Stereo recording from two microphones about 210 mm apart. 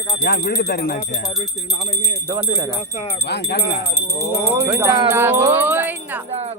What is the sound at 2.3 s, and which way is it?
Speech, 15° right (ahead or behind).